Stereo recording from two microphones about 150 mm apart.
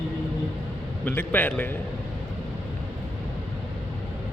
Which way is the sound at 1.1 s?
10° left (ahead or behind).